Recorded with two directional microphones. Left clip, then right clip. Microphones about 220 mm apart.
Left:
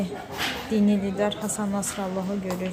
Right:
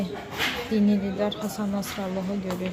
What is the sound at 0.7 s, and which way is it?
A woman's voice, 5° left (ahead or behind).